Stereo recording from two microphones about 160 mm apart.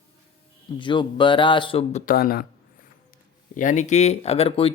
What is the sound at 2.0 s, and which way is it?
Speech, 65° left (ahead or behind).